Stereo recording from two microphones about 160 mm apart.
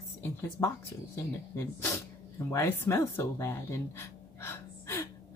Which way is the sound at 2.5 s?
15° left (ahead or behind).